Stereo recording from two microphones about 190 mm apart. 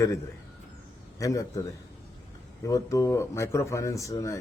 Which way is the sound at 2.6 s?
20° left (ahead or behind).